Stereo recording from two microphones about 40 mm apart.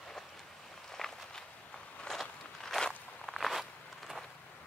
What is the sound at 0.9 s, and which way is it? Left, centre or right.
Walk, centre.